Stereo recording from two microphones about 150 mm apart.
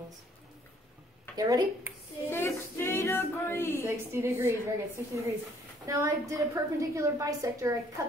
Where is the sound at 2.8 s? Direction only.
15° left (ahead or behind).